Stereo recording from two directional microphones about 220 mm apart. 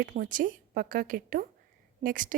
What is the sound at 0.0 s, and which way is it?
A woman's voice, 40° right (ahead or behind).